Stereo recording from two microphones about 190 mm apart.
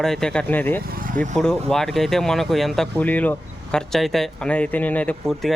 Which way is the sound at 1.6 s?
Centre (ahead or behind).